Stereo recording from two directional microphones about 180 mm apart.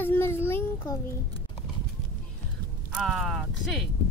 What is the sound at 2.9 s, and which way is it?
Speech, centre (ahead or behind).